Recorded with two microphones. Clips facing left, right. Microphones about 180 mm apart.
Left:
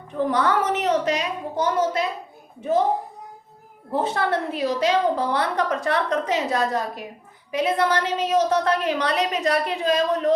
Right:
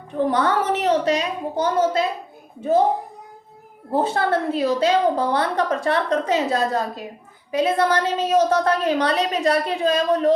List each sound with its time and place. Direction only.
0.3 s a woman's voice: 30° right (ahead or behind)
3.9 s a woman's voice: 30° right (ahead or behind)